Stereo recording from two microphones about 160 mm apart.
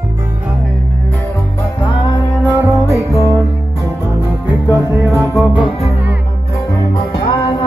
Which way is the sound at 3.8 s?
15° right (ahead or behind).